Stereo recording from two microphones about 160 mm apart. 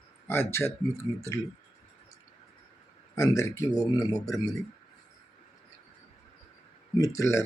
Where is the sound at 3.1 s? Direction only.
20° left (ahead or behind).